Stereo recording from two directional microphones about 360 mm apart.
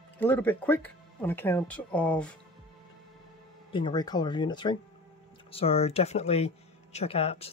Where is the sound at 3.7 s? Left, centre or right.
Centre.